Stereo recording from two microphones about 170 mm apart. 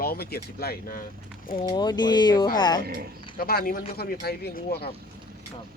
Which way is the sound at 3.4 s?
60° left (ahead or behind).